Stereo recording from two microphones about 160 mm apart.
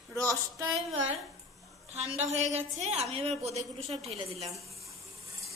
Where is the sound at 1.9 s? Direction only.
40° right (ahead or behind).